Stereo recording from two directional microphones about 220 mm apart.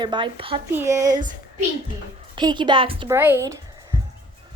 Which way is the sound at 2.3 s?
20° right (ahead or behind).